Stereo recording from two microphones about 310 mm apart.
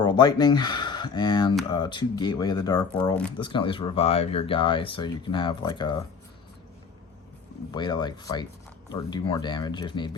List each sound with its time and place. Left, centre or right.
0.0 s speech: centre
3.3 s speech: centre
7.7 s speech: centre